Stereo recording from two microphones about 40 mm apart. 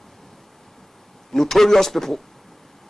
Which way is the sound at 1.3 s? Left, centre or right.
Centre.